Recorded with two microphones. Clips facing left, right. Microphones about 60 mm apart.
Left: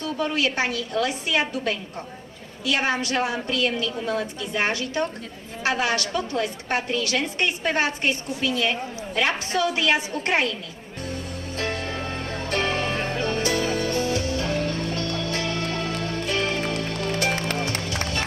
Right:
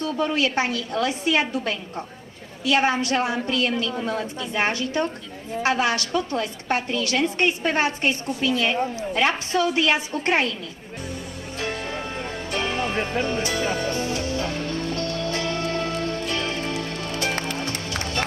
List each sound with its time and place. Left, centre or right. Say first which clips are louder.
0.0 s a woman's voice: right 2 dB; right
11.5 s music: even; centre
14.5 s music: left 1 dB; left
15.2 s music: right 1 dB; right
16.2 s music: left 2 dB; left